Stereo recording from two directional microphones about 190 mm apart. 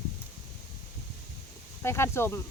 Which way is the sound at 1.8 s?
15° left (ahead or behind).